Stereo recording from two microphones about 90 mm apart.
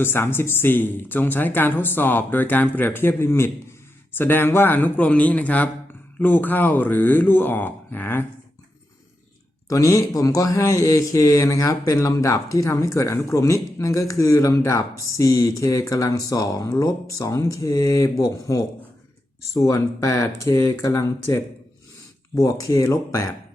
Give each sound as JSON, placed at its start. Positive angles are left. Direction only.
{"t": 0.0, "sound": "speech", "side_deg": 25}
{"t": 9.6, "sound": "speech", "side_deg": 35}
{"t": 16.6, "sound": "speech", "side_deg": 30}